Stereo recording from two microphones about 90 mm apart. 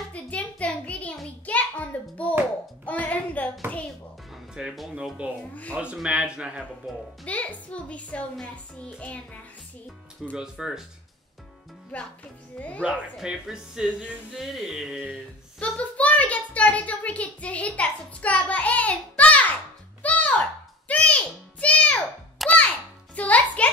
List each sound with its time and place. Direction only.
0.1 s a sound: 15° left (ahead or behind)
4.6 s speech: 5° right (ahead or behind)
5.5 s a woman's voice: 15° left (ahead or behind)
6.0 s speech: 10° right (ahead or behind)
7.2 s a woman's voice: 15° left (ahead or behind)
10.3 s speech: 10° right (ahead or behind)
12.5 s a woman's voice: 15° left (ahead or behind)
13.2 s speech: 5° right (ahead or behind)
14.3 s music: 5° right (ahead or behind)
15.6 s a child's voice: 15° left (ahead or behind)
20.0 s music: 15° left (ahead or behind)
22.4 s music: centre (ahead or behind)
23.1 s music: 15° left (ahead or behind)